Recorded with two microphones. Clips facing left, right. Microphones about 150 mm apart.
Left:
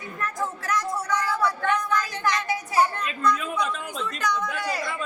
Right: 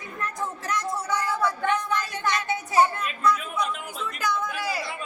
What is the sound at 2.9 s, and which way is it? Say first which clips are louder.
A woman's voice: even; 5° right (ahead or behind).